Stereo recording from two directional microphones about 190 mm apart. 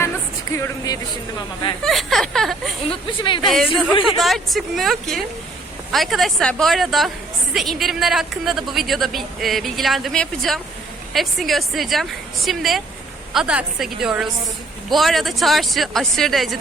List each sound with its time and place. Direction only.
0.5 s speech: 15° left (ahead or behind)
1.8 s a woman's voice: centre (ahead or behind)
2.9 s speech: 25° left (ahead or behind)
3.4 s a woman's voice: centre (ahead or behind)